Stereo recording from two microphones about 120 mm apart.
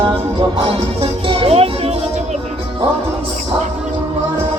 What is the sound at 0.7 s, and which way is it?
Music, 50° right (ahead or behind).